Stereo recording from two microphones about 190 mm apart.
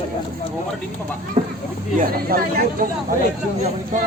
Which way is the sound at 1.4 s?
25° right (ahead or behind).